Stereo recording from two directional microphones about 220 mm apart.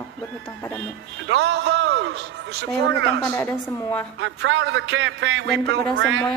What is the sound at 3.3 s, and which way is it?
Speech, 10° left (ahead or behind).